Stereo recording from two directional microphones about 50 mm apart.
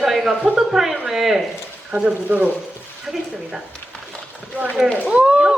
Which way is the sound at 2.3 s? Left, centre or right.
Right.